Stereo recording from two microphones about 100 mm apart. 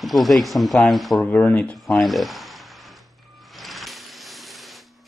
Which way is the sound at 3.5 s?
Centre (ahead or behind).